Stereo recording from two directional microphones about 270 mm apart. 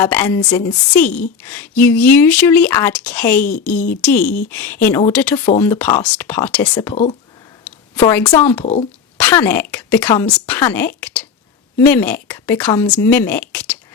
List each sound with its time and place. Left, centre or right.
0.0 s a woman's voice: centre
4.2 s speech: left
4.4 s a woman's voice: centre
6.9 s speech: left
7.6 s a woman's voice: centre
8.6 s speech: left
9.1 s a woman's voice: centre